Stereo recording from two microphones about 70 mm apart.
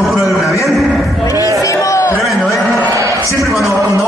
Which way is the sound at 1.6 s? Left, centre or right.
Left.